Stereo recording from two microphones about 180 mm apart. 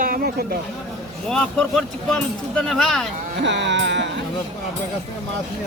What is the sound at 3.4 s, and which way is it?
Music, 80° right.